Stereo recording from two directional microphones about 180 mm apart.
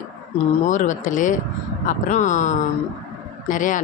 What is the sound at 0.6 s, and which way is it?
Speech, 45° left (ahead or behind).